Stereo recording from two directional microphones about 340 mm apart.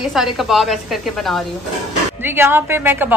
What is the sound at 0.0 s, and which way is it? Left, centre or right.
A woman's voice, centre.